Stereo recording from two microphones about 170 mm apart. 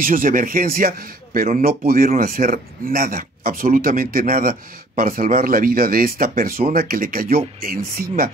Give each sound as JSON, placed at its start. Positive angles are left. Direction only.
{"t": 0.0, "sound": "speech", "side_deg": -55}